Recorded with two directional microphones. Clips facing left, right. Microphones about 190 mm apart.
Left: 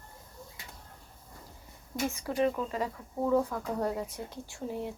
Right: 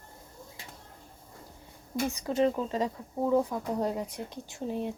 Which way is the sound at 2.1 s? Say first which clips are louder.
Right 3 dB; 20° right (ahead or behind).